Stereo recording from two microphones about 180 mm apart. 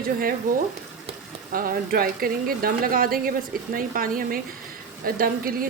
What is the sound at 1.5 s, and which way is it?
A woman's voice, 55° right (ahead or behind).